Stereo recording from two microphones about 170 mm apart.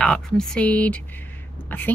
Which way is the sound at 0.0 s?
5° left (ahead or behind).